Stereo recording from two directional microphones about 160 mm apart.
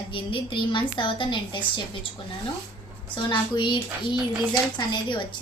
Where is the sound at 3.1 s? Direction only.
30° left (ahead or behind).